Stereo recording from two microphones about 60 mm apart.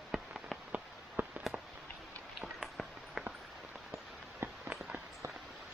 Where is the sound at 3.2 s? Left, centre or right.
Centre.